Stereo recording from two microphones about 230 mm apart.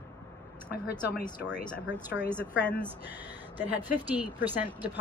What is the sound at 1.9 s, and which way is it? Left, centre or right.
Speech, centre.